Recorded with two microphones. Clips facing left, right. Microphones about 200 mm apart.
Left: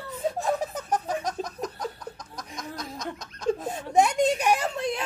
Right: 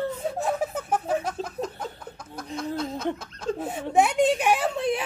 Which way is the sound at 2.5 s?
30° right (ahead or behind).